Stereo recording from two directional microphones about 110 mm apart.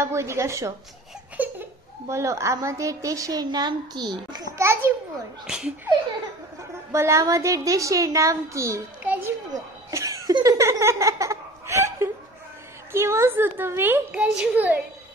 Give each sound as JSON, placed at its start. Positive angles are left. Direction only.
{"t": 0.0, "sound": "a woman's voice", "side_deg": -25}
{"t": 1.4, "sound": "laughter", "side_deg": -15}
{"t": 2.0, "sound": "a woman's voice", "side_deg": -25}
{"t": 4.6, "sound": "a woman's voice", "side_deg": -25}
{"t": 6.9, "sound": "a woman's voice", "side_deg": -25}
{"t": 9.0, "sound": "a sound", "side_deg": -15}
{"t": 9.5, "sound": "cough", "side_deg": -30}
{"t": 10.4, "sound": "a woman's voice", "side_deg": -30}